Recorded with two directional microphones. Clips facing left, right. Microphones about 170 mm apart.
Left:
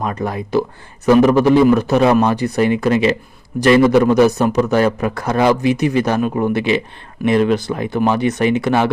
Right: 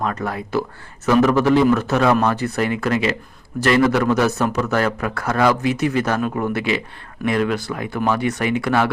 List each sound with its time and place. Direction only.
0.0 s a man's voice: 15° left (ahead or behind)